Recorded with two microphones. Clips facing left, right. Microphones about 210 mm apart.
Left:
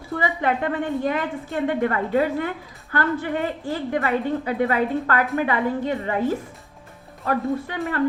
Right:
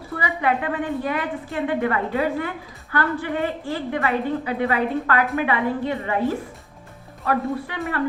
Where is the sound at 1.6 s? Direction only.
40° left (ahead or behind).